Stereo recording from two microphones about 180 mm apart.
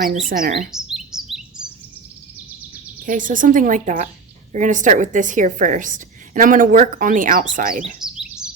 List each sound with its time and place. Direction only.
0.3 s a woman's voice: 50° right (ahead or behind)
0.7 s chirp: 5° right (ahead or behind)
3.0 s a woman's voice: 45° right (ahead or behind)
8.0 s a sound: 5° right (ahead or behind)